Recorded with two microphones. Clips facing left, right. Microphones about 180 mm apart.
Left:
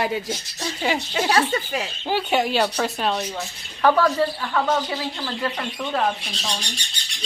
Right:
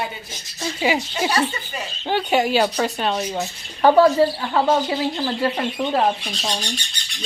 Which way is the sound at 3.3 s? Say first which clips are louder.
Right 5 dB; 30° right (ahead or behind).